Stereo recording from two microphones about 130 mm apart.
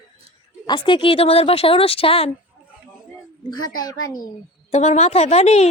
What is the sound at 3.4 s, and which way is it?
Speech, 35° left (ahead or behind).